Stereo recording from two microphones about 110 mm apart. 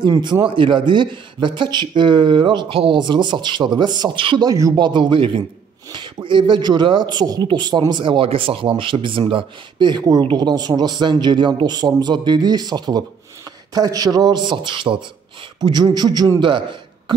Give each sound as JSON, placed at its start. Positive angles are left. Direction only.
{"t": 0.2, "sound": "speech", "side_deg": -45}
{"t": 4.5, "sound": "speech", "side_deg": -30}
{"t": 4.7, "sound": "speech", "side_deg": -45}